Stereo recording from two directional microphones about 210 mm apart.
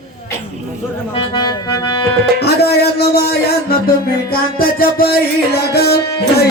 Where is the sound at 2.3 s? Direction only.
50° left (ahead or behind).